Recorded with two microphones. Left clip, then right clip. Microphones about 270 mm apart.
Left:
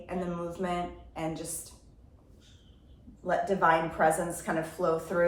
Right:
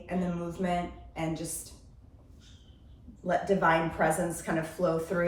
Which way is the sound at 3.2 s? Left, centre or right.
Centre.